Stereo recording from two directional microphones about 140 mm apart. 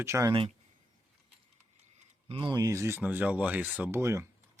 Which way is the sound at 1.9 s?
40° right (ahead or behind).